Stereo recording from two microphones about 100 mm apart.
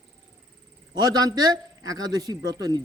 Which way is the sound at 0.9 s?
40° right (ahead or behind).